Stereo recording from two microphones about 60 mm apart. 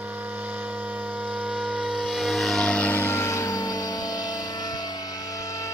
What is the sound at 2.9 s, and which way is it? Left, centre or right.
Music, left.